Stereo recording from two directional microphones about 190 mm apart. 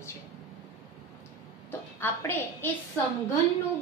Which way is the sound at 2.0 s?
10° left (ahead or behind).